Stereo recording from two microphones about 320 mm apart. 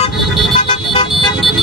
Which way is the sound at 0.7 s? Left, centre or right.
Centre.